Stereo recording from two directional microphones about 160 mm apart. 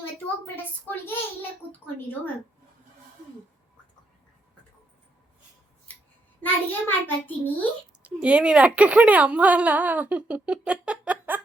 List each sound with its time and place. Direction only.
0.4 s a child's voice: 15° left (ahead or behind)
6.4 s a child's voice: 10° left (ahead or behind)
8.0 s speech: 5° right (ahead or behind)